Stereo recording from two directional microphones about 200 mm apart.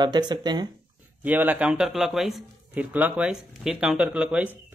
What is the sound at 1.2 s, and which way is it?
Speech, 10° right (ahead or behind).